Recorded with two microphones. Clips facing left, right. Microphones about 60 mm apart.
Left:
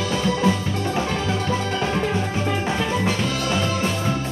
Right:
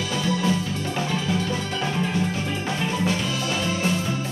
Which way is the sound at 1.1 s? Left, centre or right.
Left.